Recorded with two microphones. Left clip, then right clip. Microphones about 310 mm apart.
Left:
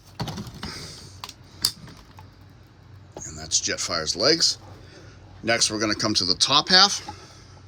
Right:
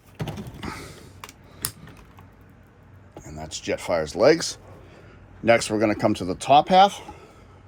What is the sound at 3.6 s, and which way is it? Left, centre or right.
Speech, centre.